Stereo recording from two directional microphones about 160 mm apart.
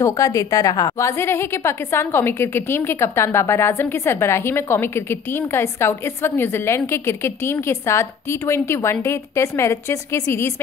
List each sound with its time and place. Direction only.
0.0 s a woman's voice: 20° left (ahead or behind)